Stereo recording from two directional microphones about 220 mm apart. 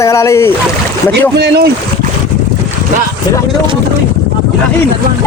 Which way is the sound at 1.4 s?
45° right (ahead or behind).